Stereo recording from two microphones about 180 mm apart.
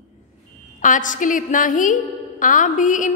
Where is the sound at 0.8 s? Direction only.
45° left (ahead or behind).